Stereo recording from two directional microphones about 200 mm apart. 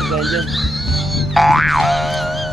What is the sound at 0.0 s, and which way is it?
Music, centre (ahead or behind).